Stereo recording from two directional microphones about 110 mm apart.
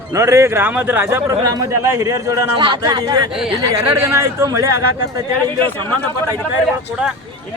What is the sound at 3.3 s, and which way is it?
Speech, 5° right (ahead or behind).